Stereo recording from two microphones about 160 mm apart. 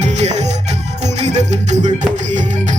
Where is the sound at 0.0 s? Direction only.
45° right (ahead or behind).